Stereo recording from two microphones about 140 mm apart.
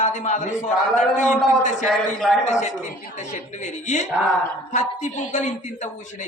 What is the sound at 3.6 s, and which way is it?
A man's voice, 60° left (ahead or behind).